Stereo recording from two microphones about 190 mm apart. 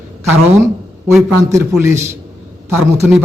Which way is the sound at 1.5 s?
15° right (ahead or behind).